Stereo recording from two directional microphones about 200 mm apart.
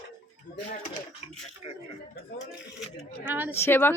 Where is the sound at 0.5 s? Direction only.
35° left (ahead or behind).